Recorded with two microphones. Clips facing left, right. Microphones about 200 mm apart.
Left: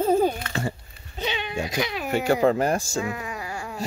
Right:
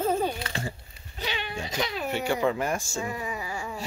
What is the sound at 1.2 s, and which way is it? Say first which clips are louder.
Goat: left 4 dB; 20° left (ahead or behind).